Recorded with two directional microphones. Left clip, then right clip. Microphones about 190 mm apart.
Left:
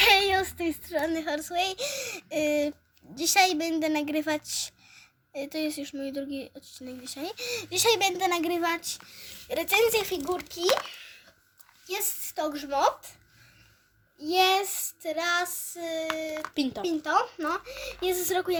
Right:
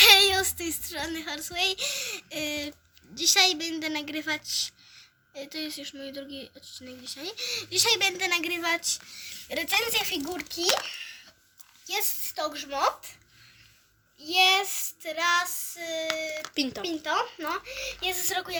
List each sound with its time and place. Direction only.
0.5 s a child's voice: 30° left (ahead or behind)
9.5 s a woman's voice: 45° left (ahead or behind)
10.8 s a sound: 45° left (ahead or behind)
11.9 s a woman's voice: 50° left (ahead or behind)
14.2 s a woman's voice: 50° left (ahead or behind)
16.6 s speech: 5° left (ahead or behind)
16.8 s a woman's voice: 45° left (ahead or behind)